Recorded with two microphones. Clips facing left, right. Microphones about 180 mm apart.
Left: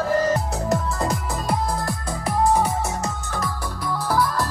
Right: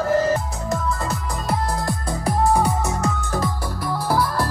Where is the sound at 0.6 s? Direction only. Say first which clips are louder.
Left 1 dB; 40° left (ahead or behind).